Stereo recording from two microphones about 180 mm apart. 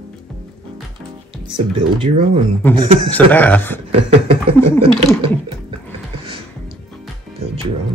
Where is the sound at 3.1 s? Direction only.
10° left (ahead or behind).